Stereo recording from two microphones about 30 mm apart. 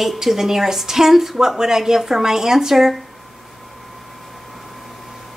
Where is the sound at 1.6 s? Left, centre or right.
Centre.